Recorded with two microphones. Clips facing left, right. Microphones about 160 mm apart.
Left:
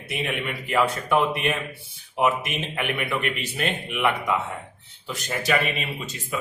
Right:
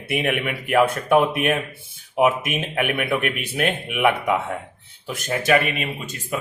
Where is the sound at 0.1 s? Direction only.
60° right (ahead or behind).